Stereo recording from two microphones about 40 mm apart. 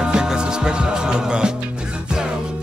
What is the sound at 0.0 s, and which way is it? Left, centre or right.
Music, centre.